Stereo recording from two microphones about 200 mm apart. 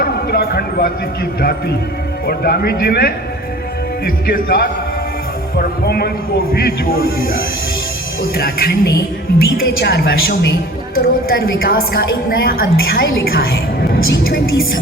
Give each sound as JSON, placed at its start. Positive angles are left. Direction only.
{"t": 0.0, "sound": "a woman's voice", "side_deg": 50}